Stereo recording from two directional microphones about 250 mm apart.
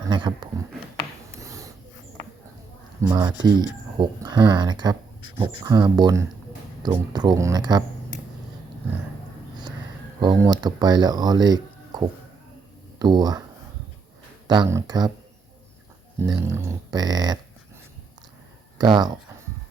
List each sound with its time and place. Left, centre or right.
0.1 s speech: centre
1.4 s a sound: centre
3.0 s speech: centre
10.2 s speech: centre
14.4 s speech: centre
16.2 s speech: centre
18.8 s speech: centre